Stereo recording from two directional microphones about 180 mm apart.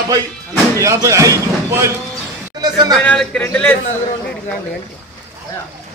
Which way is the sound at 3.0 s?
5° left (ahead or behind).